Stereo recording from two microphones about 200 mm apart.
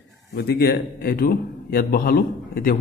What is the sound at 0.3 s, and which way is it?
A man's voice, 50° left (ahead or behind).